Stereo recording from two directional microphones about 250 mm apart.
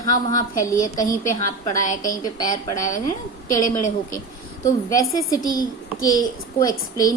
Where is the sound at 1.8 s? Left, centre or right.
Left.